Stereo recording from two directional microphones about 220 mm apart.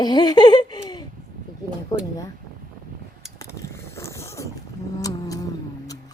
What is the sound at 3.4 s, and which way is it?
Vehicle, 10° left (ahead or behind).